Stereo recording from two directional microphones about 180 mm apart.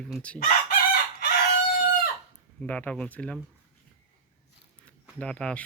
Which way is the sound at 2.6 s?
5° left (ahead or behind).